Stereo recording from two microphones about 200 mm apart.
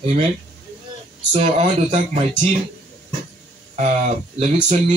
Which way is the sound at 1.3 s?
25° right (ahead or behind).